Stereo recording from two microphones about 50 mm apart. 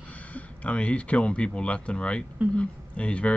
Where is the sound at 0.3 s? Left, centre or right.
Left.